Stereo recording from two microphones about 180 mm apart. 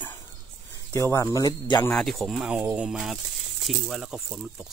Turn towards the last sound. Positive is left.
turn(degrees=-5)  # may be behind; listen again after turning